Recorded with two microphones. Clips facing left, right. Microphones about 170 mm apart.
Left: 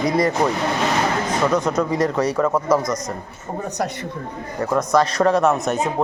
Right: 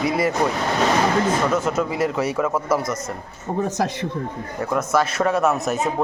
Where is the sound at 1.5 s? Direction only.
5° right (ahead or behind).